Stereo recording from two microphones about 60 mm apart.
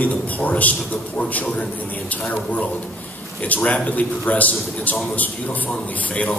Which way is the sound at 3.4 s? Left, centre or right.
Left.